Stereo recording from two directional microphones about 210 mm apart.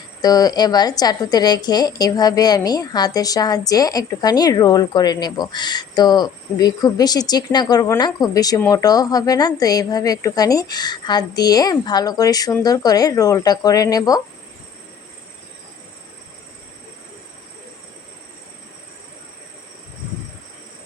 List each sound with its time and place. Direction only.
0.2 s a woman's voice: 20° left (ahead or behind)